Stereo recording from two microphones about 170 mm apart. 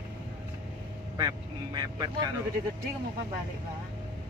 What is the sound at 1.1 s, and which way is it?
Speech, 20° right (ahead or behind).